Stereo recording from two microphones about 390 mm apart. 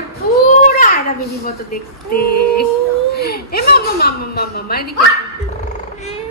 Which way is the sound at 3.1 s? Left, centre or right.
Left.